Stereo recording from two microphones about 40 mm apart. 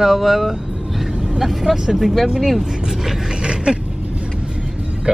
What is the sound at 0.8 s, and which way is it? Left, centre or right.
Vehicle, centre.